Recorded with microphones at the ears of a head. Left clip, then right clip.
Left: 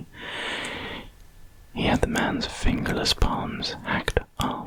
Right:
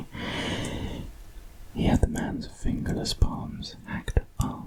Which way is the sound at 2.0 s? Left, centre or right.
Left.